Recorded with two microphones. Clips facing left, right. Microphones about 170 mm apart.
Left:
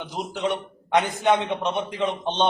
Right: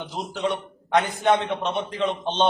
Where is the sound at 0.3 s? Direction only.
20° left (ahead or behind).